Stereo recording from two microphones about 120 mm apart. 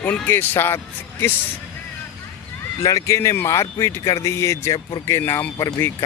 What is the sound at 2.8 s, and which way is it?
Speech, 25° left (ahead or behind).